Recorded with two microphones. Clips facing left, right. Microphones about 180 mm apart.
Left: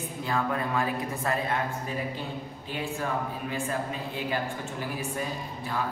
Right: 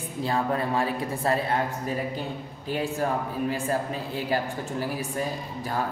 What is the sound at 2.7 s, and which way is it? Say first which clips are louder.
Speech: right 5 dB; 40° right (ahead or behind).